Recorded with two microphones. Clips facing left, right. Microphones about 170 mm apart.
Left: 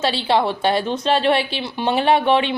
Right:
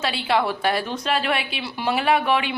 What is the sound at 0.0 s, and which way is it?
A woman's voice, 30° left (ahead or behind).